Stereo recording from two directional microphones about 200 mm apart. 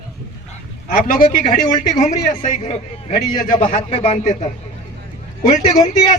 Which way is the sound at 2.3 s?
35° left (ahead or behind).